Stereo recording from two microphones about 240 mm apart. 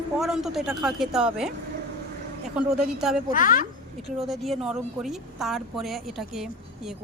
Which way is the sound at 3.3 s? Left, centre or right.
Left.